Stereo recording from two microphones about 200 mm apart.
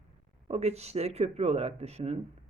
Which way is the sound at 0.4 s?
30° right (ahead or behind).